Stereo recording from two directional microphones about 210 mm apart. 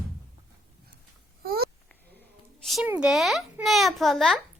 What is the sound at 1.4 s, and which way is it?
Babbling, 45° right (ahead or behind).